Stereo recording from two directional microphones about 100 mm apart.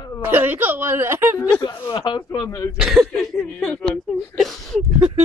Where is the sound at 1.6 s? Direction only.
45° left (ahead or behind).